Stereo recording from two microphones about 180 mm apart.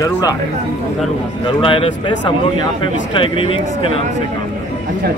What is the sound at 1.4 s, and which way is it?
Speech, 30° left (ahead or behind).